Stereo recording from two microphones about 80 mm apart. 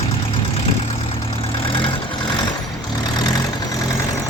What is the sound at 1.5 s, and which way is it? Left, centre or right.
Vehicle, left.